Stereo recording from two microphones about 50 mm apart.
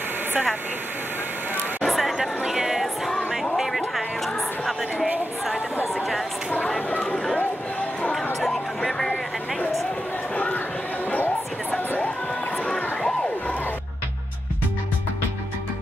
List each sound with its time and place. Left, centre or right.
1.8 s a sound: centre
3.5 s music: centre
4.9 s speech: right
8.4 s chatter: centre
10.3 s chatter: left
12.6 s a sound: centre